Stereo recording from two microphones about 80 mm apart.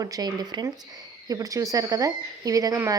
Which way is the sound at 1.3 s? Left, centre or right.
Right.